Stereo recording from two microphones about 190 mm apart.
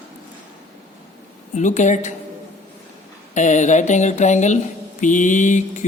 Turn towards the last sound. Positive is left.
turn(degrees=40)  # may be behind; listen again after turning